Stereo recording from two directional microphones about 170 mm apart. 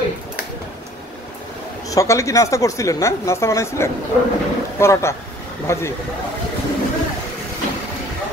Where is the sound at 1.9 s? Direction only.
20° left (ahead or behind).